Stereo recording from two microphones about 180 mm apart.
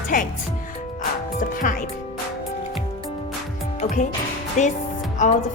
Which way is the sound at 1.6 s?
45° left (ahead or behind).